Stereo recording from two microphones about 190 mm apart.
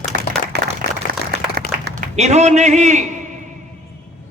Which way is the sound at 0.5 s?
60° right (ahead or behind).